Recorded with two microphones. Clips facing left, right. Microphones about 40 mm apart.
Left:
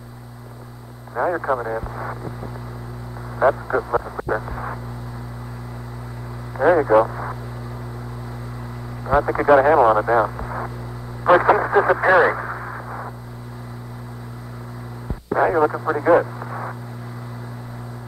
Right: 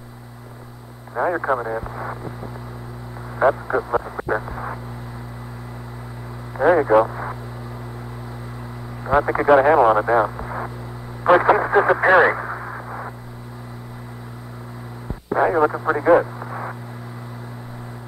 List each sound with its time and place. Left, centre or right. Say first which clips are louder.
1.2 s speech: even; centre
1.6 s speech: even; centre
4.5 s a sound: even; centre
6.5 s a man's voice: even; centre
9.0 s speech: even; right
9.4 s speech: even; centre
12.4 s radio: even; centre
15.0 s radio: even; centre
16.0 s speech: even; centre